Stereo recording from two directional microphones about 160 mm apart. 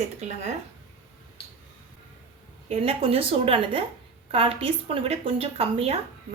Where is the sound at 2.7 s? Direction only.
35° right (ahead or behind).